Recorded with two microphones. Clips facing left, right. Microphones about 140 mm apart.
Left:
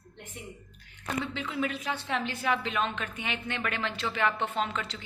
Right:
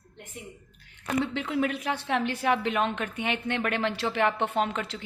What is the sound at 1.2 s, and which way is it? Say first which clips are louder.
Speech: right 5 dB; 65° right (ahead or behind).